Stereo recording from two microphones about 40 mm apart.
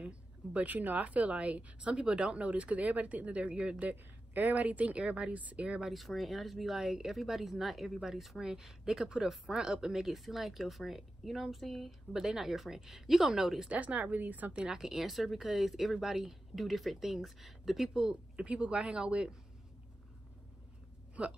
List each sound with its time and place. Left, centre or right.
0.0 s speech: right
3.8 s a woman's voice: right
4.6 s speech: right
5.9 s a woman's voice: centre
12.1 s a woman's voice: centre
13.7 s speech: right
14.8 s speech: centre
18.3 s speech: right
21.2 s speech: right